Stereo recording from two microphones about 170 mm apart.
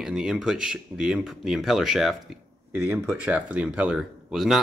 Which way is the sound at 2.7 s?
15° right (ahead or behind).